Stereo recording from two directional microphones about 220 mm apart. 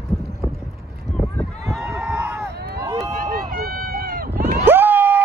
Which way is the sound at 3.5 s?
45° right (ahead or behind).